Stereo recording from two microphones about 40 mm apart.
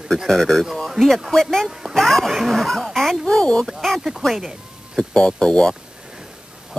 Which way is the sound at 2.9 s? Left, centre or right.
Centre.